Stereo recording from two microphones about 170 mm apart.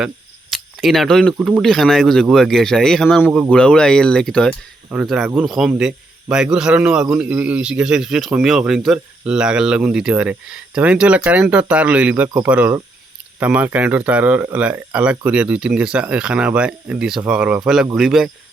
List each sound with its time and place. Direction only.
0.5 s a man's voice: centre (ahead or behind)